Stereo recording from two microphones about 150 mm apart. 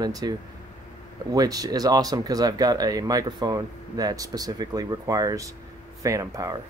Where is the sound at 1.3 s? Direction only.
25° right (ahead or behind).